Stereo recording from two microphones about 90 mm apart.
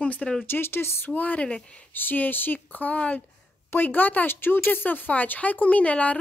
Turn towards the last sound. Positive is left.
turn(degrees=15)  # may be behind; listen again after turning